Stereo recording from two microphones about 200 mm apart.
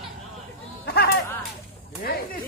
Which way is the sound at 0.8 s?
50° left (ahead or behind).